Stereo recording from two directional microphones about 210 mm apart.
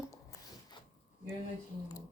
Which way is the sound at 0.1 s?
15° left (ahead or behind).